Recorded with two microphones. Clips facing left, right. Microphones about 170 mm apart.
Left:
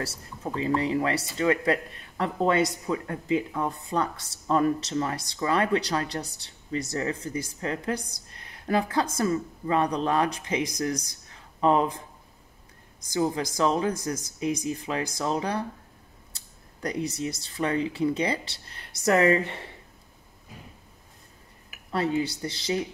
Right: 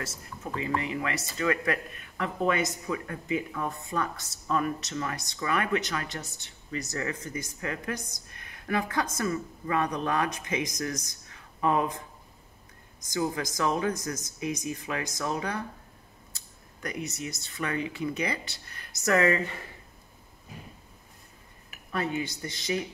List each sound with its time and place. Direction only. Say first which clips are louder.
0.0 s speech: left 4 dB; 30° left (ahead or behind)
13.2 s speech: left 4 dB; 25° left (ahead or behind)
21.9 s speech: left 5 dB; 30° left (ahead or behind)